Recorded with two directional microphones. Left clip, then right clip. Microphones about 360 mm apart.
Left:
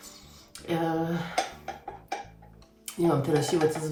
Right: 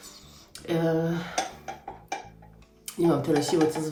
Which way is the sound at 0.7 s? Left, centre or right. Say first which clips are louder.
Right 2 dB; centre.